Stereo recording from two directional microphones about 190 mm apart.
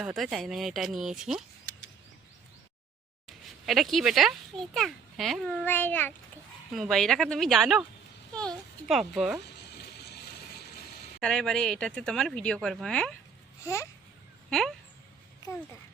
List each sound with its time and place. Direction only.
0.0 s speech: centre (ahead or behind)
3.2 s a child's voice: centre (ahead or behind)
9.7 s a sound: 60° left (ahead or behind)
11.2 s speech: 5° left (ahead or behind)